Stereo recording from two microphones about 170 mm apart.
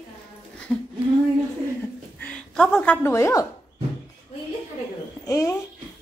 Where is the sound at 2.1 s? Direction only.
5° left (ahead or behind).